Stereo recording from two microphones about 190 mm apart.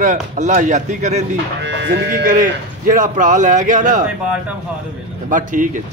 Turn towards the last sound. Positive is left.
turn(degrees=-45)  # may be behind; listen again after turning